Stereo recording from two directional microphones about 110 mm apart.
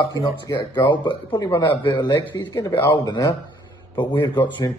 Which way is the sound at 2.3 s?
35° left (ahead or behind).